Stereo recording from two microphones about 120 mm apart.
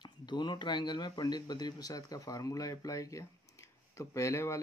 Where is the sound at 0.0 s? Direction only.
40° left (ahead or behind).